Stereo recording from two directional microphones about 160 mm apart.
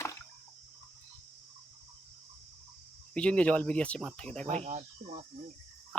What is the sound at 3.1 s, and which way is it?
Speech, 5° left (ahead or behind).